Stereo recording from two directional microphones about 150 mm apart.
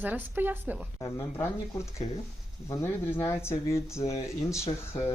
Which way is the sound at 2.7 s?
20° left (ahead or behind).